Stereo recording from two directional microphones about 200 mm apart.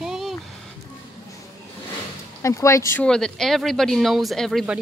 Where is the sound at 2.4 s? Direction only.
15° left (ahead or behind).